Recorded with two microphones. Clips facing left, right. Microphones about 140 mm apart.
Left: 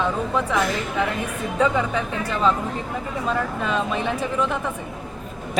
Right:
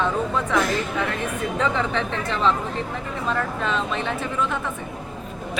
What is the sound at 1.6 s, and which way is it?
Speech, 10° left (ahead or behind).